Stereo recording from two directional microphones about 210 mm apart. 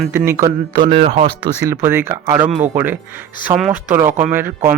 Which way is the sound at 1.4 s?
15° right (ahead or behind).